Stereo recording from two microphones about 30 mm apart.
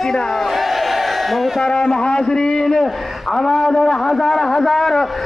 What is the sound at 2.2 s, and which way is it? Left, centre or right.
Speech, left.